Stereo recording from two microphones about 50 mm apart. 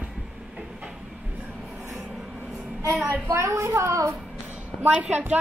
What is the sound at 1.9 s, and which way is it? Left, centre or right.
Music, centre.